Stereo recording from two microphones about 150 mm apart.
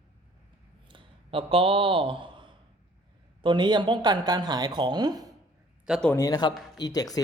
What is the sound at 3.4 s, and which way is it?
Speech, 30° right (ahead or behind).